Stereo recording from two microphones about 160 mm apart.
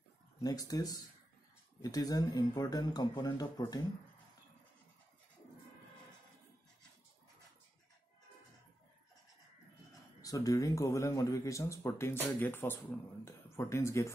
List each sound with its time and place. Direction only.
0.4 s speech: 25° left (ahead or behind)
10.2 s speech: 20° left (ahead or behind)